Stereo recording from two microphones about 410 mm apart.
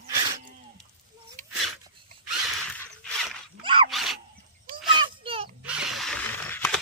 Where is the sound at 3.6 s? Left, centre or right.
Centre.